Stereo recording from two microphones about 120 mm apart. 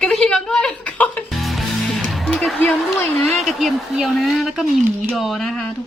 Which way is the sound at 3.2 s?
Centre (ahead or behind).